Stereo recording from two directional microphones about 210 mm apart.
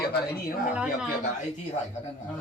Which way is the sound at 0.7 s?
5° right (ahead or behind).